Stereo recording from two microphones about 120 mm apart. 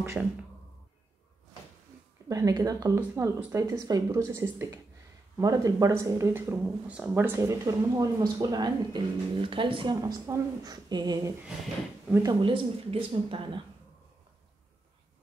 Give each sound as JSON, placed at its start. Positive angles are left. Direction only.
{"t": 0.0, "sound": "speech", "side_deg": -15}
{"t": 2.2, "sound": "speech", "side_deg": -30}
{"t": 3.0, "sound": "speech", "side_deg": -15}
{"t": 3.8, "sound": "speech", "side_deg": -30}
{"t": 12.4, "sound": "a woman's voice", "side_deg": -50}